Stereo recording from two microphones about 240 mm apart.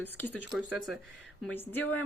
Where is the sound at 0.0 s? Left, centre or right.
Centre.